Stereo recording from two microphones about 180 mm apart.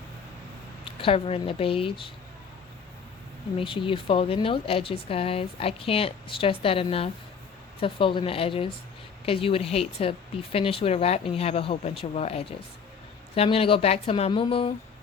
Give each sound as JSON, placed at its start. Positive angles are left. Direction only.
{"t": 0.9, "sound": "speech", "side_deg": 30}
{"t": 3.6, "sound": "speech", "side_deg": 30}